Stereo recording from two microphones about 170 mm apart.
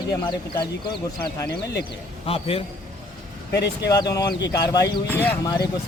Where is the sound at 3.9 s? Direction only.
20° left (ahead or behind).